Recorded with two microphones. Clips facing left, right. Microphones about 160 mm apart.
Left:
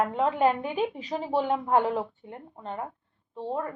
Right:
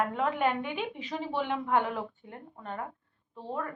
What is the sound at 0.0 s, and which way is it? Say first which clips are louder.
A woman's voice: left 4 dB; 25° left (ahead or behind).